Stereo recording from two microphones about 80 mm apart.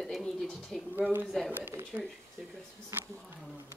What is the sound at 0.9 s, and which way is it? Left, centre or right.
Speech, right.